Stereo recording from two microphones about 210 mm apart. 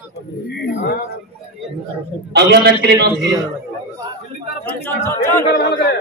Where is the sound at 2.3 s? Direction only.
55° right (ahead or behind).